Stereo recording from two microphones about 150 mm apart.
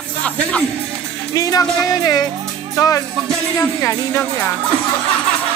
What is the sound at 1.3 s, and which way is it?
Speech, 25° left (ahead or behind).